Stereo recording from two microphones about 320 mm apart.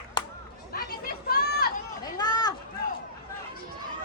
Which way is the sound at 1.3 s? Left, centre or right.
Left.